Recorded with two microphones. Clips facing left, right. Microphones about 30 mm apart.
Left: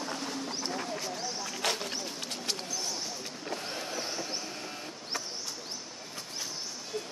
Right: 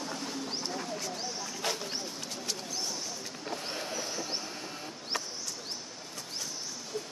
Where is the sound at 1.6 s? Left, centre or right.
Left.